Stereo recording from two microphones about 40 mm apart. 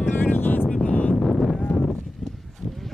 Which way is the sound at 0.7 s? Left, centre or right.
Left.